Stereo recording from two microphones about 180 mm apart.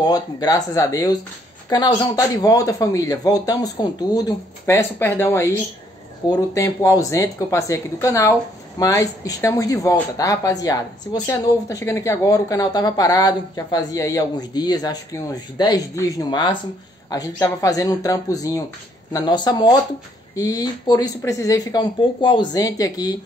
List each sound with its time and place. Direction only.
0.0 s a woman's voice: 20° left (ahead or behind)